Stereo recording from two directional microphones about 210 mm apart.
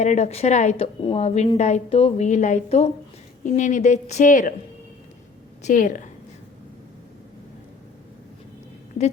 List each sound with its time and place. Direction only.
0.0 s a woman's voice: 35° left (ahead or behind)
5.6 s a woman's voice: 40° left (ahead or behind)